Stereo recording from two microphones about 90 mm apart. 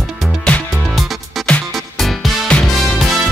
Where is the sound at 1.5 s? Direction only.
5° left (ahead or behind).